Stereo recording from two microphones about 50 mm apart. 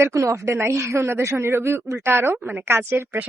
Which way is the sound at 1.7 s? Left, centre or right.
Right.